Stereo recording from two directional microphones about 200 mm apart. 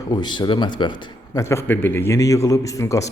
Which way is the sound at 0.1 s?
20° left (ahead or behind).